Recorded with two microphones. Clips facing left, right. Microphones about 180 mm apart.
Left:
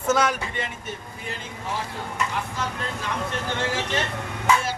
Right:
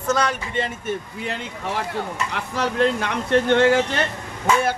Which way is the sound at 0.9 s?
65° right (ahead or behind).